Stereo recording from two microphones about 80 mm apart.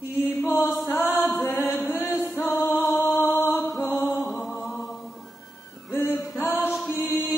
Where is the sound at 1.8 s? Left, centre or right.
Left.